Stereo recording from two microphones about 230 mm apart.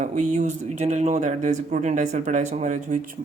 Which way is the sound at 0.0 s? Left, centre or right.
Right.